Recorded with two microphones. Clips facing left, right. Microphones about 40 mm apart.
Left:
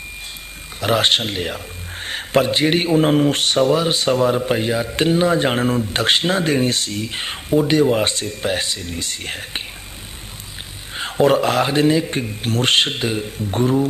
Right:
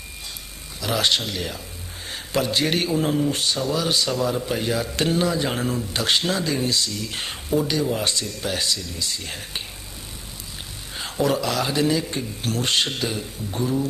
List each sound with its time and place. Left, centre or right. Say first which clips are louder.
0.7 s speech: left 5 dB; left
2.0 s a sound: left 7 dB; left
2.6 s a man's voice: left 6 dB; left
3.0 s speech: left 6 dB; left
3.8 s speech: left 6 dB; left
5.3 s speech: left 7 dB; left
7.1 s speech: left 4 dB; left
7.7 s speech: left 7 dB; left
11.0 s speech: left 7 dB; left
13.5 s speech: left 7 dB; left